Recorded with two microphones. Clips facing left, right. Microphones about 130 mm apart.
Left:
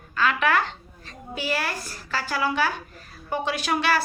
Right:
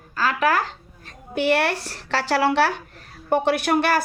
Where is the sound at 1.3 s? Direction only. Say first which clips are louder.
Right 8 dB; 65° right (ahead or behind).